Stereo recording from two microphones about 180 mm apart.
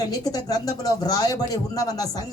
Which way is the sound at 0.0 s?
20° left (ahead or behind).